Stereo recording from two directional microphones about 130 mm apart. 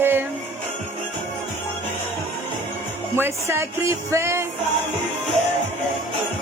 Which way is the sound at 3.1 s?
20° right (ahead or behind).